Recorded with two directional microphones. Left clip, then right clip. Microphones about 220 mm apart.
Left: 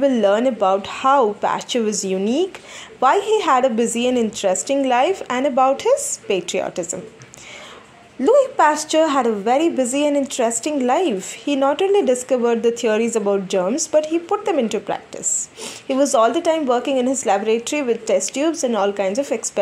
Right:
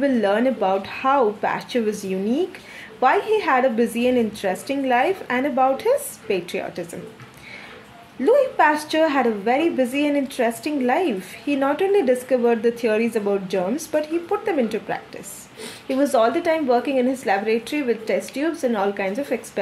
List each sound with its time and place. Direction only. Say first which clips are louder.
0.0 s a woman's voice: left 3 dB; 25° left (ahead or behind)
8.2 s a woman's voice: left 2 dB; 25° left (ahead or behind)